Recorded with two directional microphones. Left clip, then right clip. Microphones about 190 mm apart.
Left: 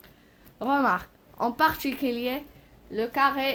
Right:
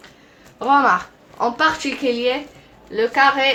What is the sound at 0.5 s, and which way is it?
Speech, 45° left (ahead or behind).